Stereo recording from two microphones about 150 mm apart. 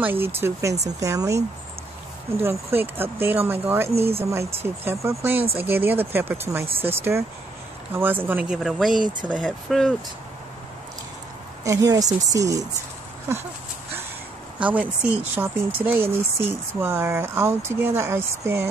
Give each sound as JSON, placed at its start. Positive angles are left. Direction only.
{"t": 0.0, "sound": "speech", "side_deg": -15}
{"t": 2.4, "sound": "speech", "side_deg": -15}
{"t": 3.9, "sound": "speech", "side_deg": -40}
{"t": 4.3, "sound": "speech", "side_deg": -15}
{"t": 7.9, "sound": "speech", "side_deg": -15}
{"t": 11.6, "sound": "speech", "side_deg": -20}
{"t": 14.6, "sound": "speech", "side_deg": -10}